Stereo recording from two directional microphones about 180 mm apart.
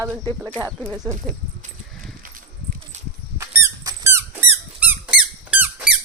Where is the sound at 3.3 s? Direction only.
15° right (ahead or behind).